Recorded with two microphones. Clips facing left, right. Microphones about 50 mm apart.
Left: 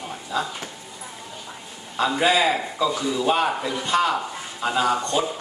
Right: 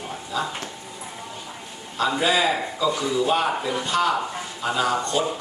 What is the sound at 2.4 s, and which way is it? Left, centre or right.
A man's voice, centre.